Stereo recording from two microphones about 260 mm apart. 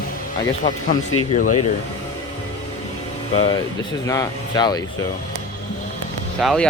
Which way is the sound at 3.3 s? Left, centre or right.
Centre.